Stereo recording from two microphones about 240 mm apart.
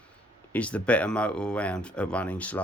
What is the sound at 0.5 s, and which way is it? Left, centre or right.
Speech, centre.